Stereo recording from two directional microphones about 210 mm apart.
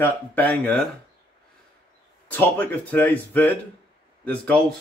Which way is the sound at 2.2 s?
10° left (ahead or behind).